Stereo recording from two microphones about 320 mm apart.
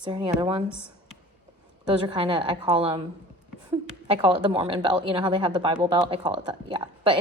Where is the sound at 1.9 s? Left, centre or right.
Centre.